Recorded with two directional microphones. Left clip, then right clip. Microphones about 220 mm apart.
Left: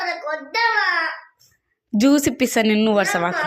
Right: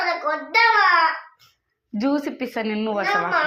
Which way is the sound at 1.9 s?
60° left (ahead or behind).